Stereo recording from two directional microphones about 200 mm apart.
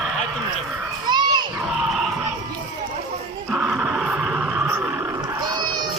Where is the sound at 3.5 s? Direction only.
Centre (ahead or behind).